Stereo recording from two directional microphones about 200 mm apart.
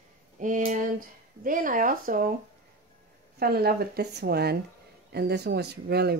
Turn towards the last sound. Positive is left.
turn(degrees=-55)  # may be behind; listen again after turning